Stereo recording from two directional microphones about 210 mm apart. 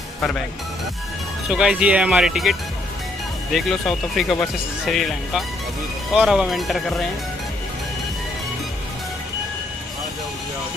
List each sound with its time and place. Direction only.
1.5 s speech: 5° right (ahead or behind)
3.5 s speech: centre (ahead or behind)